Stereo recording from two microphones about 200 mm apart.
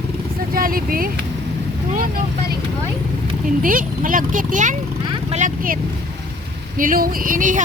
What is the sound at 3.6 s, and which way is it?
Speech, 45° right (ahead or behind).